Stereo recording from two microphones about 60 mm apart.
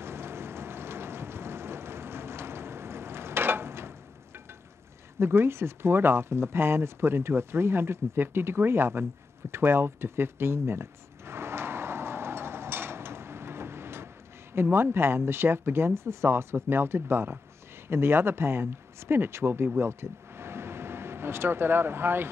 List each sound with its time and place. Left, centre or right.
0.0 s vehicle: right
5.2 s speech: right
9.5 s a sound: right
14.5 s speech: right
19.8 s vehicle: right